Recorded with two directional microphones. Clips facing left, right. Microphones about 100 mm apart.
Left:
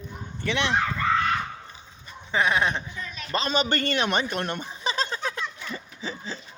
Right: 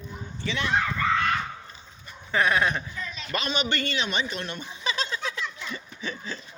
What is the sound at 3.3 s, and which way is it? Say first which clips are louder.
A man's voice: left 4 dB; 35° left (ahead or behind).